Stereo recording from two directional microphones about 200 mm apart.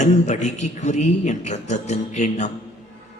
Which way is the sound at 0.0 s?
35° left (ahead or behind).